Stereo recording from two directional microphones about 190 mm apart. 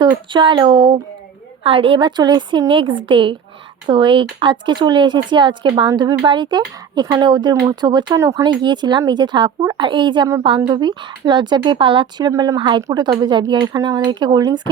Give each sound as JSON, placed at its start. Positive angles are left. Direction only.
{"t": 0.0, "sound": "speech", "side_deg": -25}